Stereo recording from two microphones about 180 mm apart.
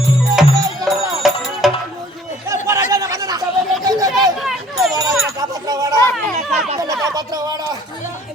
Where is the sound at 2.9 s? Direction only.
20° right (ahead or behind).